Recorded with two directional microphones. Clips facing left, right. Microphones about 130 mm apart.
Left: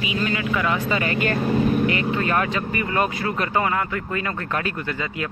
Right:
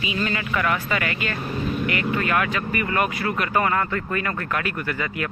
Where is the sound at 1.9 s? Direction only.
25° left (ahead or behind).